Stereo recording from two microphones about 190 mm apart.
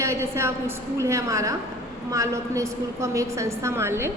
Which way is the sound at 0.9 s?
15° right (ahead or behind).